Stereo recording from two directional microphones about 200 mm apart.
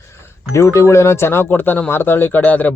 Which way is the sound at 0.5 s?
15° left (ahead or behind).